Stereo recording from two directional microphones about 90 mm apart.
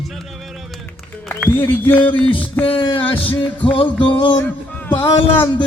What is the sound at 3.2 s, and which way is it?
Music, 15° left (ahead or behind).